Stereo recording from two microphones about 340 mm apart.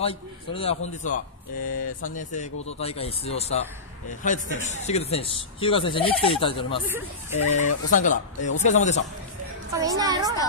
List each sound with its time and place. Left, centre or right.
0.0 s speech: centre
9.7 s a woman's voice: centre